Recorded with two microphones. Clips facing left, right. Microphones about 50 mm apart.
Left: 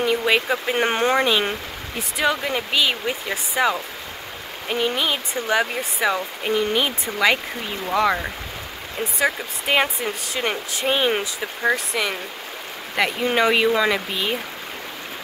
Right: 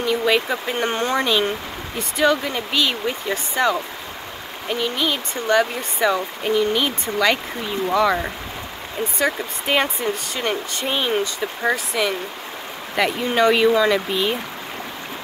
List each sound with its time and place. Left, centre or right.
0.0 s speech: centre
2.0 s speech: centre